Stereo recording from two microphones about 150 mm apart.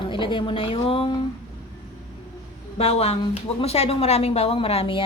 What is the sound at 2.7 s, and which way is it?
Speech, 45° left (ahead or behind).